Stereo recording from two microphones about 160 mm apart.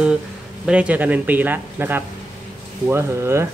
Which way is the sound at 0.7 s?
10° right (ahead or behind).